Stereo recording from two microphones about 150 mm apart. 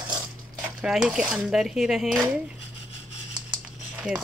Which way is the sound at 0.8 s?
5° right (ahead or behind).